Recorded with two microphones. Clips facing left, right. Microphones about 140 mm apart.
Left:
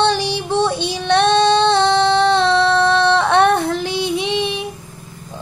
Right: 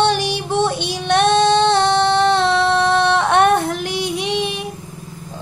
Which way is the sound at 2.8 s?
15° right (ahead or behind).